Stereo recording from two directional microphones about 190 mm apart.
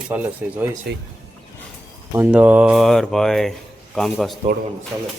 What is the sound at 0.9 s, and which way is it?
Speech, 55° right (ahead or behind).